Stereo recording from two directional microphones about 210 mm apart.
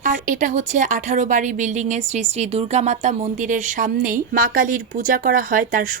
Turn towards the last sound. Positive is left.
turn(degrees=-40)  # may be behind; listen again after turning